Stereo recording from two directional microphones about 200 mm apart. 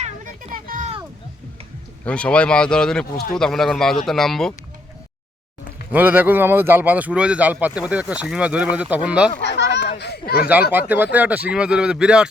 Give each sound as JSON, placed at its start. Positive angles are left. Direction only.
{"t": 0.0, "sound": "a sound", "side_deg": -40}
{"t": 2.0, "sound": "speech", "side_deg": 5}
{"t": 5.9, "sound": "speech", "side_deg": -10}
{"t": 9.4, "sound": "a sound", "side_deg": 60}
{"t": 10.0, "sound": "speech", "side_deg": 55}
{"t": 10.7, "sound": "speech", "side_deg": -10}